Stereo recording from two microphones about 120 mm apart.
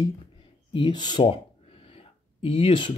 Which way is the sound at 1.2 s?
50° left (ahead or behind).